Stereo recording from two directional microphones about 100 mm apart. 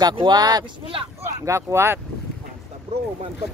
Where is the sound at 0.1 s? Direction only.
50° right (ahead or behind).